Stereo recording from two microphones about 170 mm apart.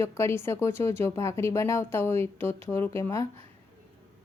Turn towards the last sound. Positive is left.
turn(degrees=15)  # may be behind; listen again after turning